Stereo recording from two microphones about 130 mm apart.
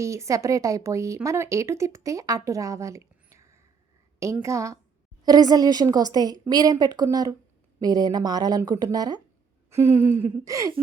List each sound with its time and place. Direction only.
0.0 s a woman's voice: 25° right (ahead or behind)
9.6 s speech: 20° right (ahead or behind)